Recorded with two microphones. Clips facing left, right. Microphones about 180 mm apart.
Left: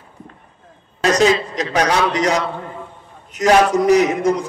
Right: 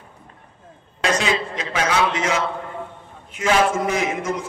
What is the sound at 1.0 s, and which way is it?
A man's voice, 40° left (ahead or behind).